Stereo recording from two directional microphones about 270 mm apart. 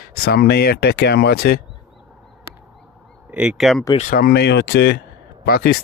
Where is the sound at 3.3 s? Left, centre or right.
Centre.